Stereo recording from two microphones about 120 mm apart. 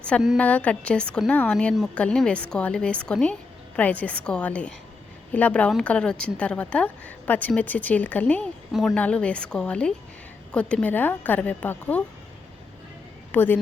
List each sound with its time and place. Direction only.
0.3 s a woman's voice: 15° left (ahead or behind)
13.3 s a woman's voice: 15° left (ahead or behind)